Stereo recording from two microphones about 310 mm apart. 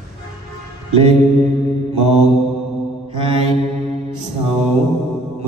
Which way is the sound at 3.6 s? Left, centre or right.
Right.